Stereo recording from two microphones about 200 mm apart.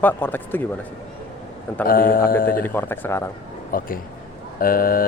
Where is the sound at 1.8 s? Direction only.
45° left (ahead or behind).